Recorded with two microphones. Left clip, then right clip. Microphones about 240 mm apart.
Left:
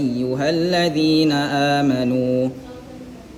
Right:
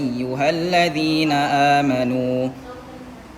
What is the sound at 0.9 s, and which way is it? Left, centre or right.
Speech, right.